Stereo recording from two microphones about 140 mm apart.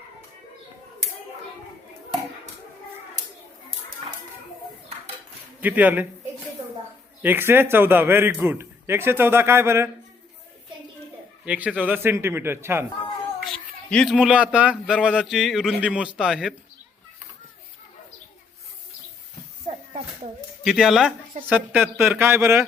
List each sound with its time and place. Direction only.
5.5 s a man's voice: 10° right (ahead or behind)
7.2 s a man's voice: 15° right (ahead or behind)
11.4 s a man's voice: 10° right (ahead or behind)
13.4 s a man's voice: 5° left (ahead or behind)
20.7 s a man's voice: 5° right (ahead or behind); by 22.6 s 20° right (ahead or behind)